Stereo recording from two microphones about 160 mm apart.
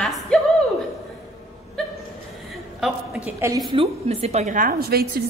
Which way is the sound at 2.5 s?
Centre (ahead or behind).